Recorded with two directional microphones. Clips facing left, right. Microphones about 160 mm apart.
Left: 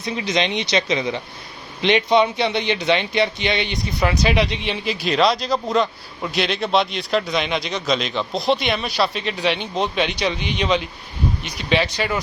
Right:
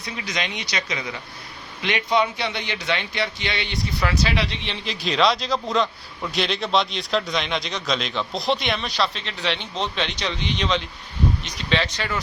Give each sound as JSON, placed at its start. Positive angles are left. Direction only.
{"t": 0.0, "sound": "speech", "side_deg": 25}